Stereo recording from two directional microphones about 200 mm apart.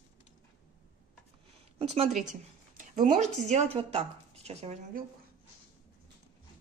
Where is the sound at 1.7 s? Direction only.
30° right (ahead or behind).